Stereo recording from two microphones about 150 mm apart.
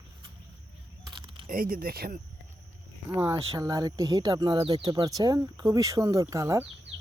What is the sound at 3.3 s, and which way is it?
Speech, 25° right (ahead or behind).